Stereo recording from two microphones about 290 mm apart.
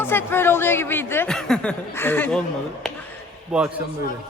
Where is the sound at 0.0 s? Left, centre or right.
Centre.